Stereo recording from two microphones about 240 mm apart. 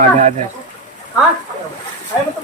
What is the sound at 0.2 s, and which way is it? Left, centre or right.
Speech, right.